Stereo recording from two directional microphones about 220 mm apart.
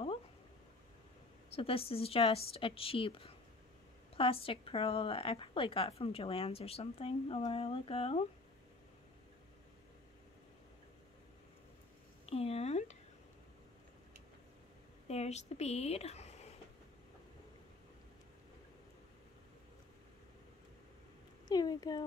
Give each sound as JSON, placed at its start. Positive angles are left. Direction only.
{"t": 1.5, "sound": "a woman's voice", "side_deg": 25}
{"t": 12.3, "sound": "a woman's voice", "side_deg": 25}
{"t": 15.0, "sound": "speech", "side_deg": 30}
{"t": 21.5, "sound": "speech", "side_deg": 20}